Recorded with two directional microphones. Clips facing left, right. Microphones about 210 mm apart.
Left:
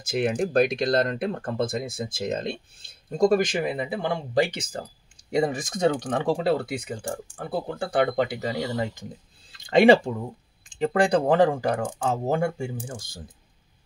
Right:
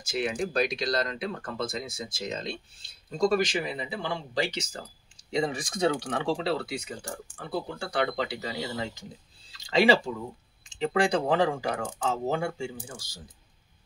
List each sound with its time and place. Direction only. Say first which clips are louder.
0.0 s speech: left 5 dB; 55° left (ahead or behind)